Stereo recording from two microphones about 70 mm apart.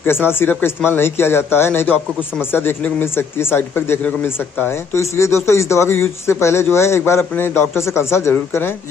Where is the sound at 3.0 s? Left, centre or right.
Left.